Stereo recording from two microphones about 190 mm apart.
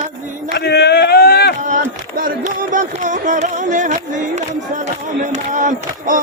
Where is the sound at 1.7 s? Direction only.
45° right (ahead or behind).